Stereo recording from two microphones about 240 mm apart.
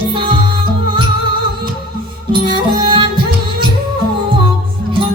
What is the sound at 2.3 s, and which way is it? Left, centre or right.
Music, centre.